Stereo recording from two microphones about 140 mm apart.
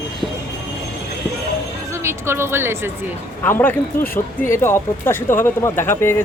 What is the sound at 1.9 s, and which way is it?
A woman's voice, 20° right (ahead or behind).